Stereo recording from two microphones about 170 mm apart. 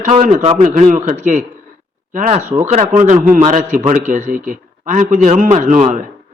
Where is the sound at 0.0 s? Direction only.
50° right (ahead or behind).